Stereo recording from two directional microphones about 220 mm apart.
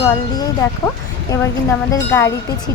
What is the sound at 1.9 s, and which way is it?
Speech, 10° left (ahead or behind).